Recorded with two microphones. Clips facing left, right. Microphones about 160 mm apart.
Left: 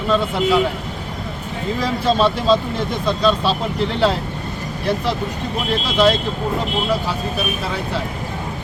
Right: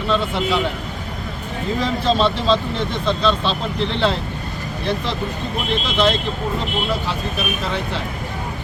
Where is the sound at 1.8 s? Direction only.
10° left (ahead or behind).